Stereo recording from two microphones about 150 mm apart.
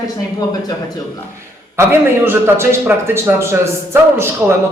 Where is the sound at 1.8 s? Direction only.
15° right (ahead or behind).